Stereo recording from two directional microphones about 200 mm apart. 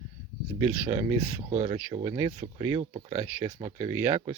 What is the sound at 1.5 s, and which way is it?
Speech, 35° right (ahead or behind).